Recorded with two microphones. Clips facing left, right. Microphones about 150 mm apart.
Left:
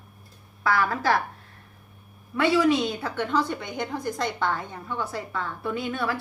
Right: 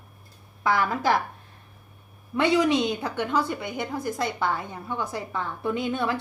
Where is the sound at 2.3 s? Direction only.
20° right (ahead or behind).